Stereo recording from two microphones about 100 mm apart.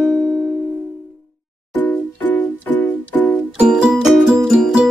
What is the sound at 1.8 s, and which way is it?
Music, 20° left (ahead or behind).